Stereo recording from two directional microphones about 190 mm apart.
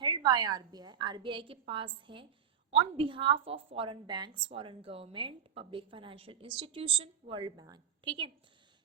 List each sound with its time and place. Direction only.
0.0 s a woman's voice: 25° right (ahead or behind)